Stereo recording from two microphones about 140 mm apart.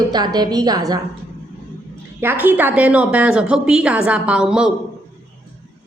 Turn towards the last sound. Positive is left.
turn(degrees=-5)  # may be behind; listen again after turning